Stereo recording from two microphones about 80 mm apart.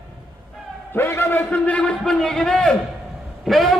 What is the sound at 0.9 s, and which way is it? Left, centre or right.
A man's voice, left.